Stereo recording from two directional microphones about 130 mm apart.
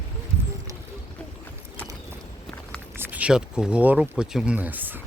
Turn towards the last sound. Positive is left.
turn(degrees=-15)  # may be behind; listen again after turning